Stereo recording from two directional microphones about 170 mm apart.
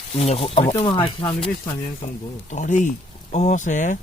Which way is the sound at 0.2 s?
35° left (ahead or behind).